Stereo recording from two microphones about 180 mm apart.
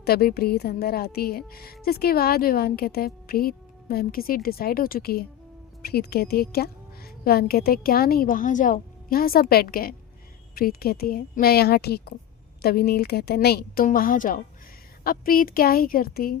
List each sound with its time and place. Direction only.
0.0 s a woman's voice: 60° left (ahead or behind)